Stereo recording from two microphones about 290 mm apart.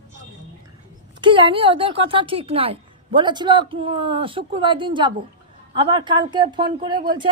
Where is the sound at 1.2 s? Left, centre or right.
Centre.